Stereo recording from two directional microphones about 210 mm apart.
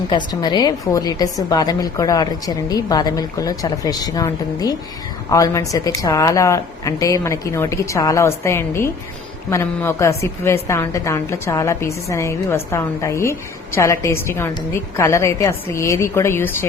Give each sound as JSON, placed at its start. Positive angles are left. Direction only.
{"t": 0.1, "sound": "a woman's voice", "side_deg": 20}